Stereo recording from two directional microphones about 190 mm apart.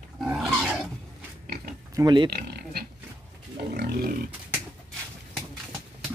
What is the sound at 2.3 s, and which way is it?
Pig, 55° right (ahead or behind).